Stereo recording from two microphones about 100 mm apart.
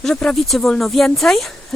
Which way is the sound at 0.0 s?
10° left (ahead or behind).